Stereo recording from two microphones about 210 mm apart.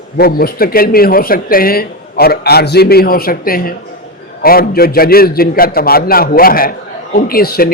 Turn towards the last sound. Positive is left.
turn(degrees=45)  # may be behind; listen again after turning